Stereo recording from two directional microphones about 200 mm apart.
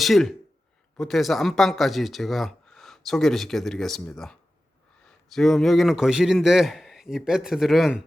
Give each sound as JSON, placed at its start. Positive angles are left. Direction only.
{"t": 0.0, "sound": "speech", "side_deg": 0}